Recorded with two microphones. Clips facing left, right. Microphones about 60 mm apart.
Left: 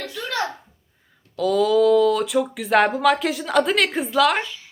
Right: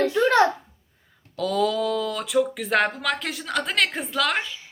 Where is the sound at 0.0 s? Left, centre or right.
Right.